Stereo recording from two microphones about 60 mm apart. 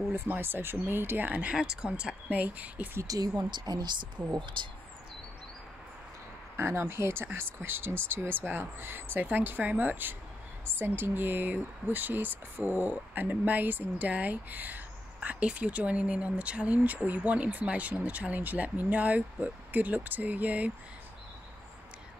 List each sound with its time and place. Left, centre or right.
0.1 s speech: right
1.5 s speech: centre
2.2 s speech: right
3.0 s speech: right
6.5 s speech: right